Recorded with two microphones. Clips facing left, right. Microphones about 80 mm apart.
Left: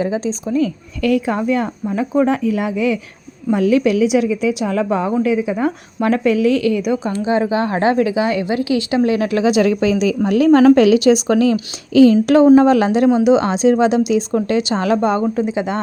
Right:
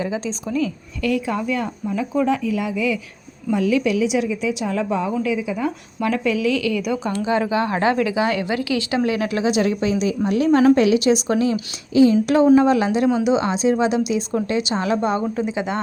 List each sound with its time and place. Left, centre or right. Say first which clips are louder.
0.0 s speech: left 5 dB; left
1.0 s a woman's voice: left 5 dB; left
9.6 s a woman's voice: left 5 dB; left
12.2 s a woman's voice: left 5 dB; left
14.4 s a woman's voice: left 4 dB; left